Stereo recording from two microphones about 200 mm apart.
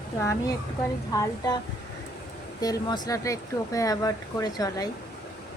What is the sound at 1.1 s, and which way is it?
Speech, 15° left (ahead or behind).